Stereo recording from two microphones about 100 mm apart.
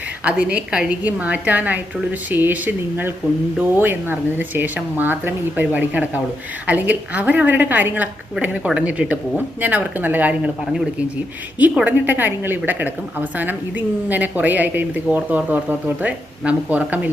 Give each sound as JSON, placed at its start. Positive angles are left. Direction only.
{"t": 0.3, "sound": "a woman's voice", "side_deg": -10}
{"t": 11.9, "sound": "a woman's voice", "side_deg": -20}